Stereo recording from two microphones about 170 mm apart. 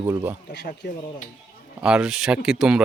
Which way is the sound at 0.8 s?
90° left.